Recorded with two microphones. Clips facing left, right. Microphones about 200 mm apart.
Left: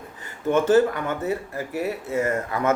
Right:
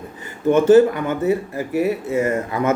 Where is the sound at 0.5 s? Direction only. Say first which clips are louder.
Right 6 dB; 20° right (ahead or behind).